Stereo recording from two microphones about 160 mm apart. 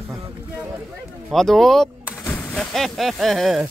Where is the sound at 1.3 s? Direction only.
Centre (ahead or behind).